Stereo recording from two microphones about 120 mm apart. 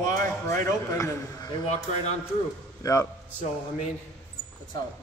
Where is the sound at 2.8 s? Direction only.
25° left (ahead or behind).